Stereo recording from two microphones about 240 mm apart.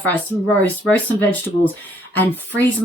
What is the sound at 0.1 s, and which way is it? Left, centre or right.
Speech, centre.